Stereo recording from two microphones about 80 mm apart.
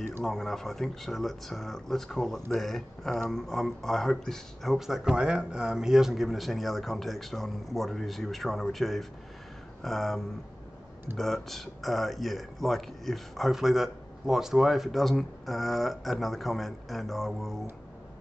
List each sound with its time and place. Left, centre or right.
0.2 s a man's voice: centre